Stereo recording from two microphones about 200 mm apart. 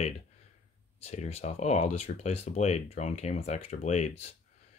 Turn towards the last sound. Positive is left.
turn(degrees=35)  # may be behind; listen again after turning